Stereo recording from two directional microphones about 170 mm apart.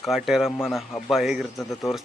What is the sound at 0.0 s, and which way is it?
Speech, centre (ahead or behind).